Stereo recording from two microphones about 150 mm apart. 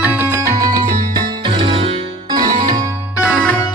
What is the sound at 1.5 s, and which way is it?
Music, 35° right (ahead or behind).